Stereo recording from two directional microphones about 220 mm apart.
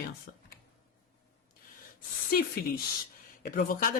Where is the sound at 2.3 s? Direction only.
40° left (ahead or behind).